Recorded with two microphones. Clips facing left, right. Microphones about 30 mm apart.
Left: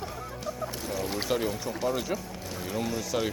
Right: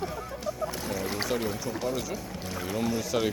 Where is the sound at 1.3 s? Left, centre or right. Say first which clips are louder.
Left 1 dB; centre.